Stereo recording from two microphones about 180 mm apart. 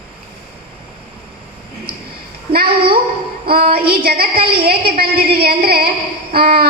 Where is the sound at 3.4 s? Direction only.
55° right (ahead or behind).